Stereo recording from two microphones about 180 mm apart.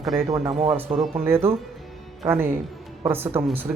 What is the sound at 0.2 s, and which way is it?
Speech, 20° right (ahead or behind).